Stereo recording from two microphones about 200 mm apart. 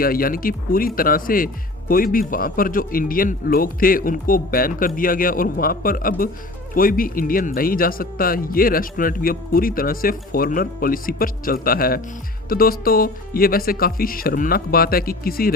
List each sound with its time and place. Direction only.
0.0 s a man's voice: 45° left (ahead or behind)